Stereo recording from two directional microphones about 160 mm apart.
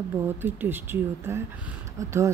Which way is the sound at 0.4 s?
15° right (ahead or behind).